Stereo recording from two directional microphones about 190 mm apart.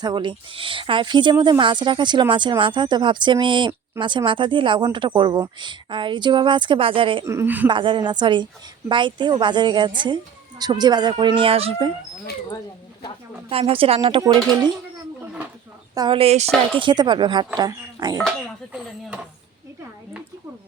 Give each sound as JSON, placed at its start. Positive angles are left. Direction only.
{"t": 0.0, "sound": "speech", "side_deg": -25}
{"t": 7.3, "sound": "a woman's voice", "side_deg": -10}
{"t": 7.7, "sound": "speech", "side_deg": -25}
{"t": 13.5, "sound": "speech", "side_deg": -30}
{"t": 16.0, "sound": "speech", "side_deg": -25}
{"t": 18.2, "sound": "speech", "side_deg": 0}